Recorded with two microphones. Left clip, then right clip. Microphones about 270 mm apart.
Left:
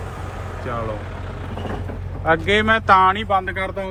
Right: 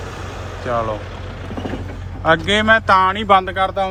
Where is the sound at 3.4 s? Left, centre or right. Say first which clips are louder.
Right 6 dB; right.